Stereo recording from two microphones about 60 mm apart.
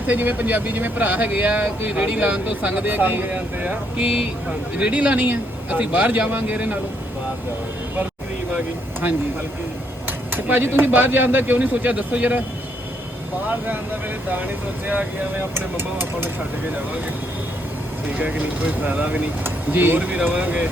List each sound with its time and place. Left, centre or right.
0.1 s speech: right
2.8 s speech: right
10.1 s speech: right
15.5 s speech: right
18.2 s speech: right